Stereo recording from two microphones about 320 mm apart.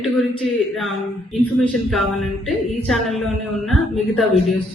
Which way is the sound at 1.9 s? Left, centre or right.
Centre.